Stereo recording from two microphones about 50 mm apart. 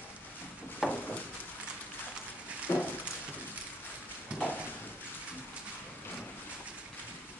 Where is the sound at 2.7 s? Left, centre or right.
Left.